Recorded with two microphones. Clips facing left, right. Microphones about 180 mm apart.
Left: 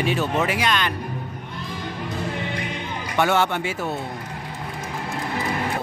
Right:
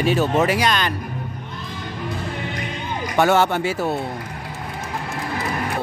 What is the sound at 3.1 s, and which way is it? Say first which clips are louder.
Speech: right 3 dB; 40° right (ahead or behind).